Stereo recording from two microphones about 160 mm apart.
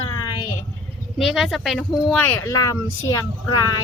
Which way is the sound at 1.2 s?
Centre (ahead or behind).